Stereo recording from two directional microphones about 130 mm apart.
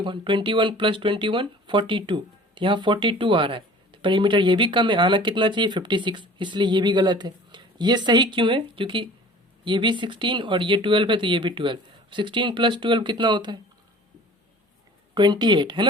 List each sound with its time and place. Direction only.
0.0 s speech: 40° right (ahead or behind)
15.1 s speech: 35° right (ahead or behind)